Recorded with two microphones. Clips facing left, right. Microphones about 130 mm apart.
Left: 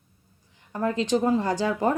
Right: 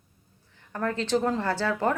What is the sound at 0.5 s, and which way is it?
Speech, 15° left (ahead or behind).